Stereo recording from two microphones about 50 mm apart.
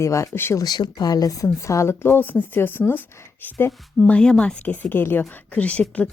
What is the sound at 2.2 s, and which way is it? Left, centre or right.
Speech, left.